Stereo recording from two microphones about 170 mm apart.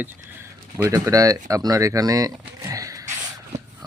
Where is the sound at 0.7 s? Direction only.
20° right (ahead or behind).